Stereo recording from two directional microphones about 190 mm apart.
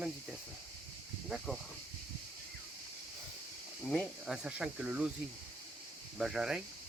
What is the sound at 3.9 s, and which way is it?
Speech, centre (ahead or behind).